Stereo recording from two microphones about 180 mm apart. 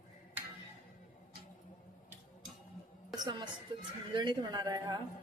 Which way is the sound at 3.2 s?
25° right (ahead or behind).